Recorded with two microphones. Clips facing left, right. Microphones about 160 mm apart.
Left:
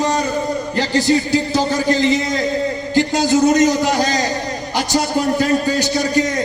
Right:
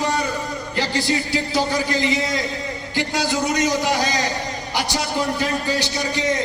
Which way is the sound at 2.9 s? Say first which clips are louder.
Left 8 dB; 45° left (ahead or behind).